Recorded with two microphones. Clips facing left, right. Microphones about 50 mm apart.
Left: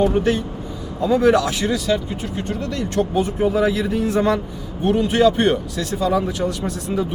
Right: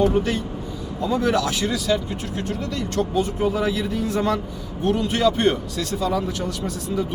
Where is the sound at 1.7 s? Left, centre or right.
Centre.